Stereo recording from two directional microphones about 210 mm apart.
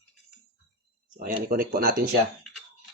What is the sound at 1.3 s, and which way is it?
Speech, 45° right (ahead or behind).